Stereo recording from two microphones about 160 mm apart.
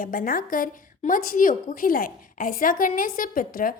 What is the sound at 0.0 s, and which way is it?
A woman's voice, 60° left (ahead or behind).